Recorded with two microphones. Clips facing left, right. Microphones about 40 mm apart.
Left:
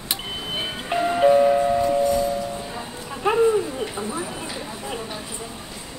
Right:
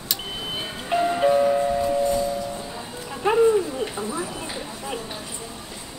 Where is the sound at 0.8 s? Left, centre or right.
Centre.